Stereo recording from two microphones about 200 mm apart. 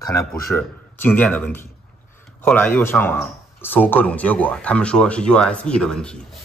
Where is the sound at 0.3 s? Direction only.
5° left (ahead or behind).